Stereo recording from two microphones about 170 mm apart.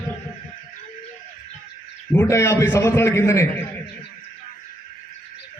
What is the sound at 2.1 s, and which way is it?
A man's voice, 15° left (ahead or behind).